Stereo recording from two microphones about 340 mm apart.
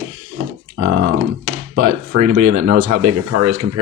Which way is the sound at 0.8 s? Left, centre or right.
Right.